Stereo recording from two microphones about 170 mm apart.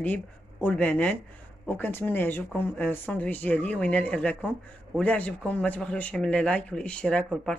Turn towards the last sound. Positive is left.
turn(degrees=5)  # may be behind; listen again after turning